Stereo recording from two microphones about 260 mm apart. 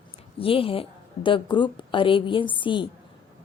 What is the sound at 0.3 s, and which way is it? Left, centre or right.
A woman's voice, left.